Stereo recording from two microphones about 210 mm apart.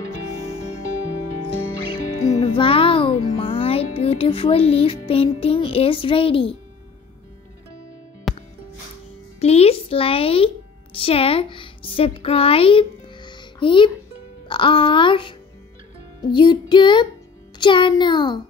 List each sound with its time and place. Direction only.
2.1 s music: 90° left
2.4 s music: 25° left (ahead or behind)
8.3 s music: centre (ahead or behind)
9.4 s music: 30° left (ahead or behind)
11.0 s a woman's voice: 25° left (ahead or behind)
14.5 s music: 25° left (ahead or behind)